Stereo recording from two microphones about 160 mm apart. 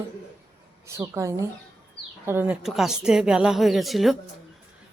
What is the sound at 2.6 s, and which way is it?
A woman's voice, centre (ahead or behind).